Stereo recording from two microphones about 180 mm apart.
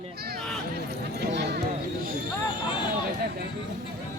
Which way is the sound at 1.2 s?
65° right (ahead or behind).